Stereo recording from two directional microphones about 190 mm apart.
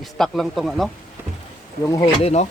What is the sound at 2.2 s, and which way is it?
Speech, 35° left (ahead or behind).